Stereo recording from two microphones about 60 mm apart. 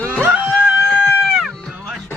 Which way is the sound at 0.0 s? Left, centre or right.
Left.